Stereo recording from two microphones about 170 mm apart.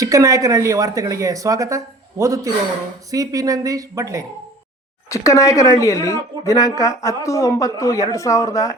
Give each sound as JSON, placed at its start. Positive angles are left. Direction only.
{"t": 0.0, "sound": "speech", "side_deg": -20}
{"t": 5.0, "sound": "speech", "side_deg": 20}